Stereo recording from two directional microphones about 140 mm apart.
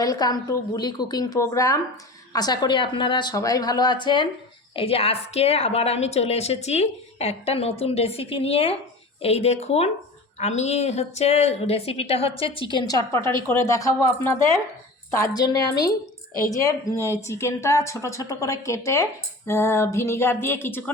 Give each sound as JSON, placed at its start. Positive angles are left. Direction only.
{"t": 0.0, "sound": "a woman's voice", "side_deg": 25}
{"t": 15.4, "sound": "a woman's voice", "side_deg": 25}